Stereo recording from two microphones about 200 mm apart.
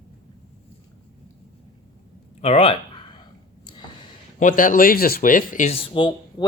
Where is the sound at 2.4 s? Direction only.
30° left (ahead or behind).